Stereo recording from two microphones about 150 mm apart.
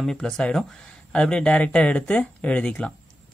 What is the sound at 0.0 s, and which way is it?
Speech, 5° left (ahead or behind).